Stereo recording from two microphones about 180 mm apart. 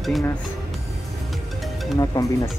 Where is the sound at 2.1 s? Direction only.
15° left (ahead or behind).